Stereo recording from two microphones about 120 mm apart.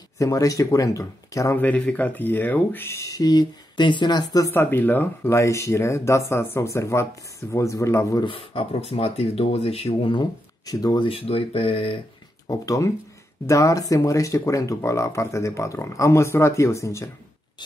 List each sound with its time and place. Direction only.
0.2 s speech: 30° left (ahead or behind)
1.6 s speech: 15° left (ahead or behind); by 4.5 s 30° left (ahead or behind)
4.5 s speech: 20° left (ahead or behind)
8.2 s speech: 50° left (ahead or behind)
10.1 s speech: 30° left (ahead or behind)
11.1 s speech: 50° left (ahead or behind)
12.4 s speech: 25° left (ahead or behind)